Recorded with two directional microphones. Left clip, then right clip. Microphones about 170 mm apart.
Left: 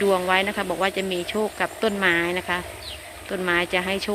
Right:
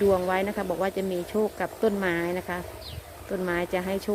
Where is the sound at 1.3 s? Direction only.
5° right (ahead or behind).